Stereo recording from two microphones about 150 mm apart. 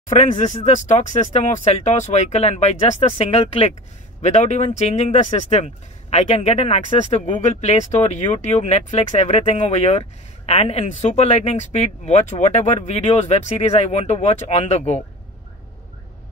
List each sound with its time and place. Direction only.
0.1 s speech: 50° left (ahead or behind)